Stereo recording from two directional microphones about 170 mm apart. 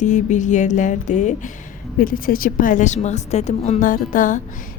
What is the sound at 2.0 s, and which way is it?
A woman's voice, 55° left (ahead or behind).